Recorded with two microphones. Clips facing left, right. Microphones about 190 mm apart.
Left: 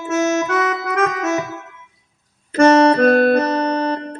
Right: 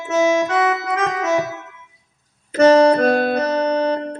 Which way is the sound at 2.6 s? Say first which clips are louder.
Even; 55° left (ahead or behind).